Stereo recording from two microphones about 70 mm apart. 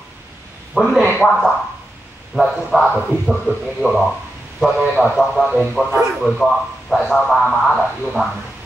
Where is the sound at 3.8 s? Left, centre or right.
Right.